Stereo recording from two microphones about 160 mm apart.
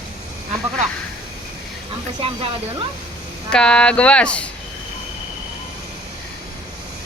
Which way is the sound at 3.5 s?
5° left (ahead or behind).